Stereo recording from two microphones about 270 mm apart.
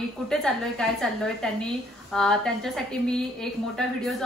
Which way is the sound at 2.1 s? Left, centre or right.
Centre.